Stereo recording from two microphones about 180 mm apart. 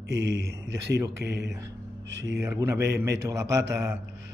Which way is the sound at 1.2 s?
70° right (ahead or behind).